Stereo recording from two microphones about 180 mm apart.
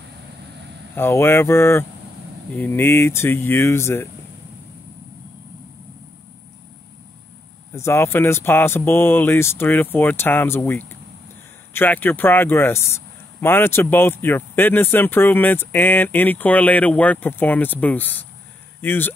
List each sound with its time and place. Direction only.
0.9 s speech: 15° left (ahead or behind)
7.7 s speech: 15° left (ahead or behind)